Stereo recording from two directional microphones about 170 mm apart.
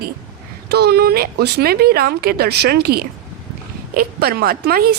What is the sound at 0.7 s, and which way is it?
A woman's voice, 70° right (ahead or behind).